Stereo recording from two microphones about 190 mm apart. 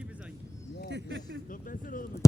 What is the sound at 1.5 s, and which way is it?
Speech, 45° left (ahead or behind).